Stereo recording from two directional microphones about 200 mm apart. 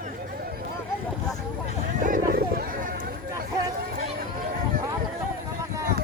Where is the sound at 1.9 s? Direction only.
45° right (ahead or behind).